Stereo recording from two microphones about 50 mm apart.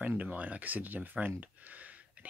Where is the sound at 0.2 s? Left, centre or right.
Right.